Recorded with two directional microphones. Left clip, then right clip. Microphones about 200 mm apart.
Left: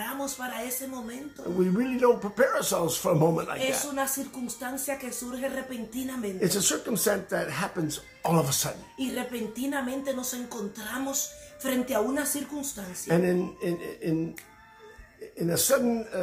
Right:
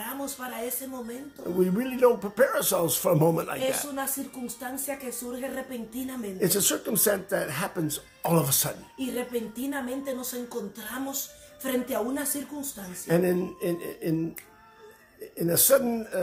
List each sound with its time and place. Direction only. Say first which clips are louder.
0.0 s a sound: left 2 dB; 5° right (ahead or behind)
1.6 s speech: right 3 dB; 40° right (ahead or behind)
3.5 s speech: left 1 dB; 5° right (ahead or behind)
5.4 s speech: left 4 dB; 5° right (ahead or behind)
6.4 s speech: right 1 dB; 45° right (ahead or behind)
8.9 s speech: right 4 dB; 5° right (ahead or behind)
13.0 s speech: right 1 dB; 45° right (ahead or behind)
15.3 s speech: right 3 dB; 45° right (ahead or behind)